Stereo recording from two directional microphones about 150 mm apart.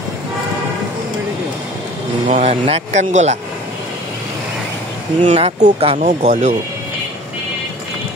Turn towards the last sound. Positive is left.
turn(degrees=-55)  # may be behind; listen again after turning